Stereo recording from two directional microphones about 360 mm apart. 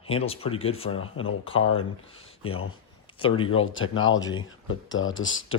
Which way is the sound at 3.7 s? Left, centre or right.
Left.